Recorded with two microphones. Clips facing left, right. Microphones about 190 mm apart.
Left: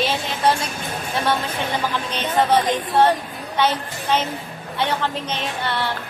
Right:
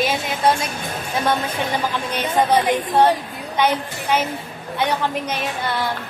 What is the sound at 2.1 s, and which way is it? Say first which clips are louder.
Speech: right 1 dB; 10° right (ahead or behind).